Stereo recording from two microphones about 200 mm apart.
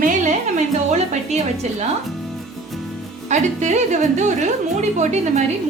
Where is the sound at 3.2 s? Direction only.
35° right (ahead or behind).